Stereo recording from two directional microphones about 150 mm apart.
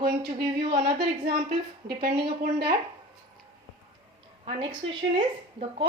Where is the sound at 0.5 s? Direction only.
90° right.